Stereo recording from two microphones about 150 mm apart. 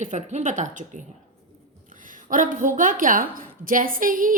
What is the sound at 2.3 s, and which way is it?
A woman's voice, 60° right (ahead or behind).